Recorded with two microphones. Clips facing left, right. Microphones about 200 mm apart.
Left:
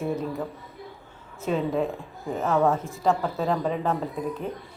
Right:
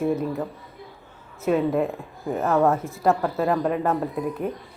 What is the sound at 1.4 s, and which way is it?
Speech, 5° right (ahead or behind).